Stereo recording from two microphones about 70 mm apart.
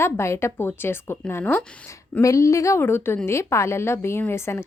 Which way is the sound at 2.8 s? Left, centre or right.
Left.